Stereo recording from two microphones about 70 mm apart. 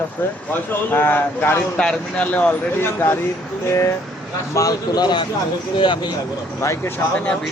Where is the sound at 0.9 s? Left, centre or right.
Left.